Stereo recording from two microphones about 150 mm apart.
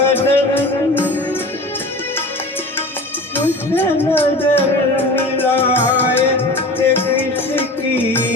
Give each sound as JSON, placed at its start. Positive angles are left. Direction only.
{"t": 0.0, "sound": "music", "side_deg": 15}
{"t": 3.3, "sound": "music", "side_deg": 15}